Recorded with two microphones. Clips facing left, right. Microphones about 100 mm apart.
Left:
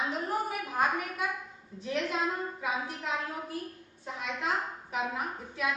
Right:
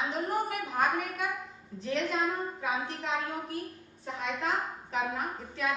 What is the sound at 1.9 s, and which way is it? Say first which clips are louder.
A woman's voice: right 1 dB; 10° left (ahead or behind).